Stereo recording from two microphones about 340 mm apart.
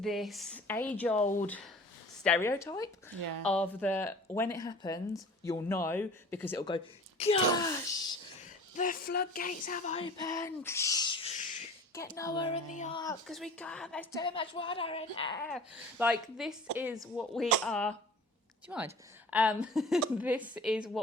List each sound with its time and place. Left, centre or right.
0.0 s speech: centre
1.2 s speech: left
1.5 s a woman's voice: centre
3.2 s speech: right
3.4 s a woman's voice: centre
8.7 s a woman's voice: left
13.2 s a woman's voice: centre
15.4 s speech: centre